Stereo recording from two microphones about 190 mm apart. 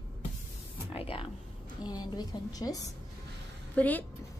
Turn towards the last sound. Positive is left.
turn(degrees=10)  # may be behind; listen again after turning